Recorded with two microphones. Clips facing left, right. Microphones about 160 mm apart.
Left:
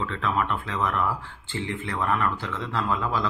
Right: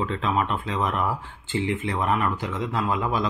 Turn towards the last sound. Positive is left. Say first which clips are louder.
# right 2 dB
turn(degrees=-15)  # may be behind; listen again after turning